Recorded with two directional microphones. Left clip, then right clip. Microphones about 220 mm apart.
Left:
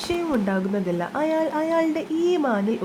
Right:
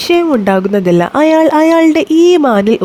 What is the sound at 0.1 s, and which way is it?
Speech, 45° right (ahead or behind).